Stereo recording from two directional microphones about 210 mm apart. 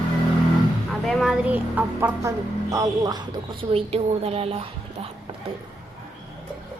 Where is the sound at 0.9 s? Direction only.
Centre (ahead or behind); by 5.0 s 30° right (ahead or behind).